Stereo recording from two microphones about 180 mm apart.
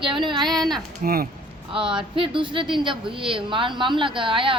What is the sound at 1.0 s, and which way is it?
Speech, 55° right (ahead or behind).